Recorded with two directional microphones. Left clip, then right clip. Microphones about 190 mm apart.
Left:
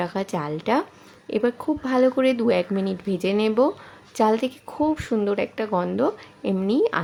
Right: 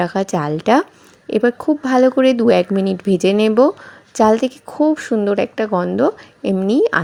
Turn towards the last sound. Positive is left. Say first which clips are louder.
# right 7 dB
turn(degrees=-30)  # may be behind; listen again after turning